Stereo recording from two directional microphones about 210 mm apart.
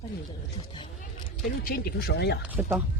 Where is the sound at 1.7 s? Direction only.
45° left (ahead or behind).